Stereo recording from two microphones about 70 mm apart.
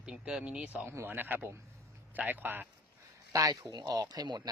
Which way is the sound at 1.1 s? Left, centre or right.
Right.